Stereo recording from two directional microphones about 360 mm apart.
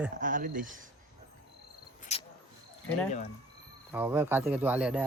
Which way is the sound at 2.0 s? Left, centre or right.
Centre.